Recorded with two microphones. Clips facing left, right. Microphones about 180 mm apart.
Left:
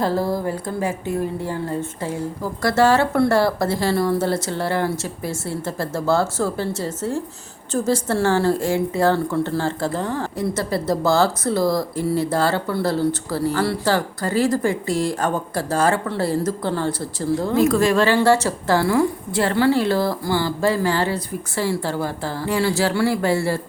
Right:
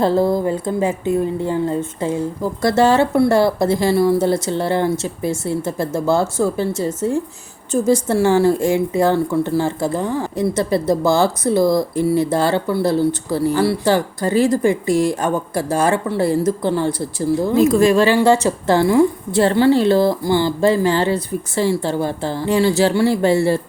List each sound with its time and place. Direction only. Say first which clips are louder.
0.0 s a woman's voice: right 5 dB; 25° right (ahead or behind)